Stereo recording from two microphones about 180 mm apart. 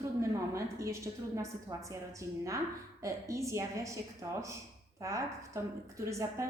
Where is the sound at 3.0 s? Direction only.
15° right (ahead or behind).